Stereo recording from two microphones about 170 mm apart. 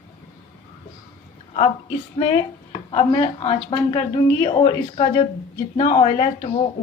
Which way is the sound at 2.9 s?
30° left (ahead or behind).